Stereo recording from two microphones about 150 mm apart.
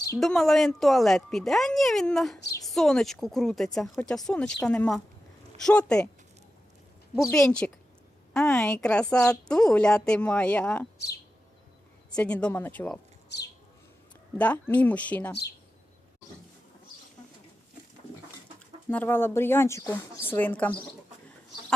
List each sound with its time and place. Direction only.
0.2 s speech: centre (ahead or behind)
7.3 s a woman's voice: 5° left (ahead or behind)
10.9 s chirp: 90° left
12.1 s a woman's voice: 5° left (ahead or behind)
14.3 s a woman's voice: 10° left (ahead or behind)
18.9 s a woman's voice: 10° left (ahead or behind)